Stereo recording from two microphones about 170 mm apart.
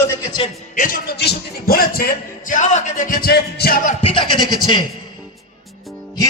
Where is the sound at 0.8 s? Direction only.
55° left (ahead or behind).